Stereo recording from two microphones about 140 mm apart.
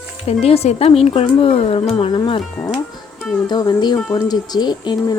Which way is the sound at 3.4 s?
30° left (ahead or behind).